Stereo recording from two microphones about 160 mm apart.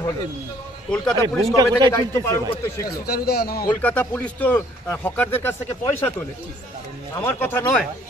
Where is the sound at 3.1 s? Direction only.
75° left (ahead or behind).